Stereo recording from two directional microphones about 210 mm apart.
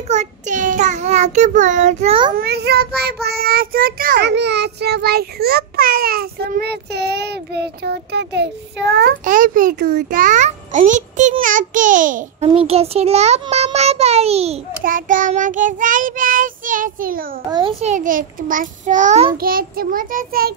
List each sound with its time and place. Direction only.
0.1 s child singing: 35° right (ahead or behind)
2.3 s child singing: 50° right (ahead or behind)
12.4 s a child's voice: 25° right (ahead or behind)
14.8 s child singing: 40° right (ahead or behind)
17.5 s child singing: 20° right (ahead or behind)
19.3 s child singing: 45° right (ahead or behind)